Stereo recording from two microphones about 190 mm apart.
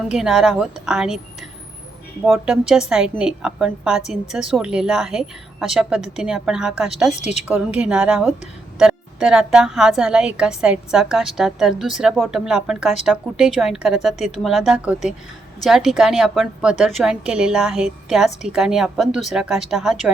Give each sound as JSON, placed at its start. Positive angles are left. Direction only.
{"t": 0.1, "sound": "a woman's voice", "side_deg": 0}
{"t": 2.2, "sound": "a woman's voice", "side_deg": -5}
{"t": 7.1, "sound": "a woman's voice", "side_deg": 35}
{"t": 7.4, "sound": "a woman's voice", "side_deg": -10}